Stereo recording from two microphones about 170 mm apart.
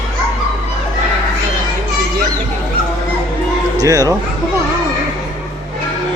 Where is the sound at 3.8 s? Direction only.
20° right (ahead or behind).